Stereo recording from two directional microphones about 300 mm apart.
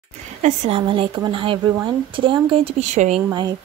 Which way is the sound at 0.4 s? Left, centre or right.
Right.